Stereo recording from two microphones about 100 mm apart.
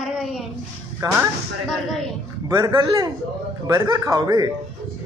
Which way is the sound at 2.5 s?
40° right (ahead or behind).